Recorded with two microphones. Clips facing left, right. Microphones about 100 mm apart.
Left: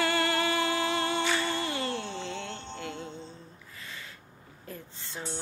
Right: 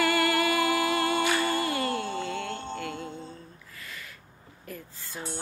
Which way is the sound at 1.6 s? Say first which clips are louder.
Right 4 dB; 25° left (ahead or behind).